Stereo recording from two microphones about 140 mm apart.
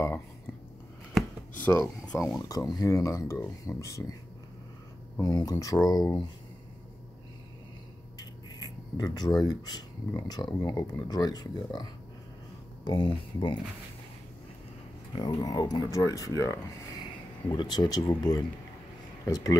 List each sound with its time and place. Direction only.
1.1 s a sound: 10° left (ahead or behind)
2.4 s speech: 25° left (ahead or behind)
5.2 s speech: 25° left (ahead or behind)
8.2 s speech: 30° left (ahead or behind)
15.1 s speech: 30° left (ahead or behind)